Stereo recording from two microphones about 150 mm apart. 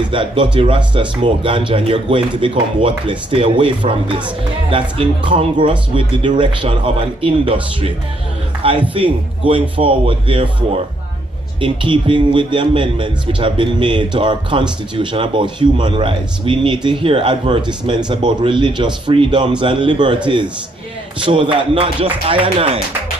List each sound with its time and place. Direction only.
0.1 s speech: 35° right (ahead or behind)
8.9 s speech: 35° right (ahead or behind)
11.6 s speech: 35° right (ahead or behind)
21.2 s speech: 35° right (ahead or behind)